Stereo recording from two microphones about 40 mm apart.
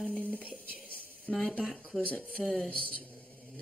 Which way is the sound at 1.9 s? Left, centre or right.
Centre.